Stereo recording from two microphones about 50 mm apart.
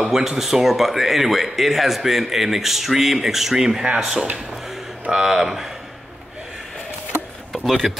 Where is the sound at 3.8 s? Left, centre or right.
Centre.